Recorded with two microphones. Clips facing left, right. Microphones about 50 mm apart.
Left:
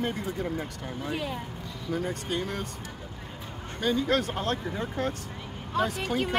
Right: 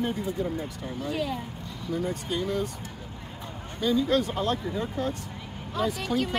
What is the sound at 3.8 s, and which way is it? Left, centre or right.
Speech, left.